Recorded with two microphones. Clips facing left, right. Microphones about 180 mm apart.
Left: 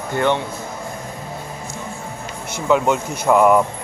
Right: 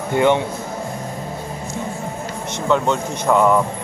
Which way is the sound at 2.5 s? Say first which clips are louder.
Left 1 dB; 5° left (ahead or behind).